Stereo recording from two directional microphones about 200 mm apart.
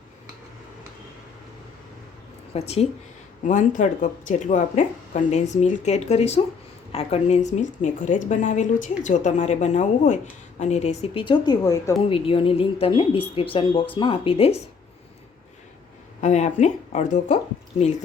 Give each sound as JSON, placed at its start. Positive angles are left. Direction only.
{"t": 2.5, "sound": "a woman's voice", "side_deg": 30}
{"t": 12.0, "sound": "speech", "side_deg": 30}
{"t": 16.2, "sound": "a woman's voice", "side_deg": 35}